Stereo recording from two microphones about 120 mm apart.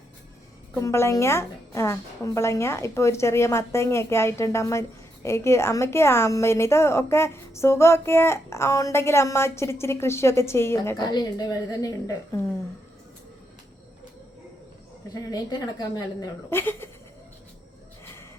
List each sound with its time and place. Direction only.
0.8 s a woman's voice: 20° left (ahead or behind)
10.9 s a woman's voice: 35° left (ahead or behind)
15.1 s a woman's voice: 30° left (ahead or behind)
16.5 s a woman's voice: 20° left (ahead or behind)
18.0 s a sound: 20° left (ahead or behind)